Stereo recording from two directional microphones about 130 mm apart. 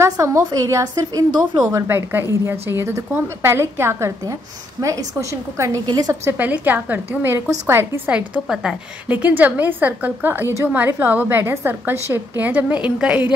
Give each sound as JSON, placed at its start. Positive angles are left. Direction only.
{"t": 0.0, "sound": "a woman's voice", "side_deg": -20}
{"t": 6.2, "sound": "a woman's voice", "side_deg": -15}